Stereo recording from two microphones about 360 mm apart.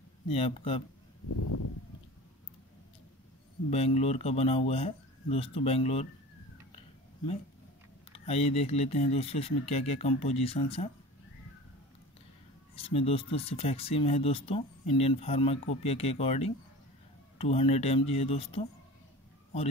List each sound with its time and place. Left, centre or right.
0.3 s speech: centre
1.3 s a sound: left
3.7 s speech: centre
8.1 s speech: centre
12.7 s speech: centre